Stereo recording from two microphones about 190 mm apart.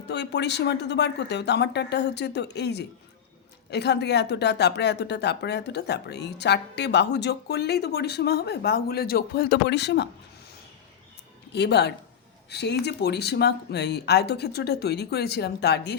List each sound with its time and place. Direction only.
0.1 s speech: 65° left (ahead or behind)
11.5 s speech: 60° left (ahead or behind)